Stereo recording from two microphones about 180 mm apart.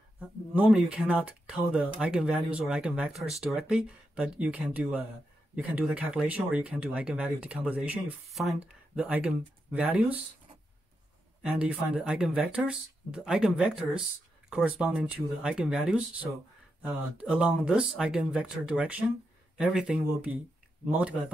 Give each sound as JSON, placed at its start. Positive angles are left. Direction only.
{"t": 0.2, "sound": "speech", "side_deg": -10}
{"t": 11.4, "sound": "speech", "side_deg": -5}